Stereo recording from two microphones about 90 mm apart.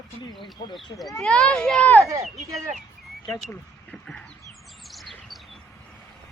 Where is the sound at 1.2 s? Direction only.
10° left (ahead or behind).